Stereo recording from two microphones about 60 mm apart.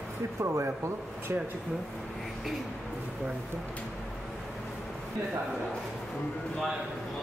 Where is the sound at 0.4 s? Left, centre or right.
Right.